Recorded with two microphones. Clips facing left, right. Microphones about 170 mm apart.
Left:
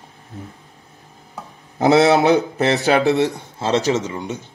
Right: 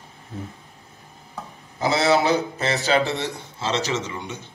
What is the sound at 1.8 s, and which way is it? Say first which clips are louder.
Speech: left 6 dB; 60° left (ahead or behind).